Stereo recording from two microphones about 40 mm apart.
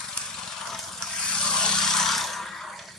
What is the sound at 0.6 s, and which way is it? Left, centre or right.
Vehicle, centre.